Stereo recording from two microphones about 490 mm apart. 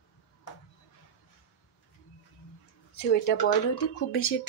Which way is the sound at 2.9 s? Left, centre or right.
Centre.